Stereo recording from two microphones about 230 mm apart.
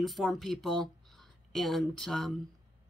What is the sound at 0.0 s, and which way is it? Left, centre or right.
Speech, centre.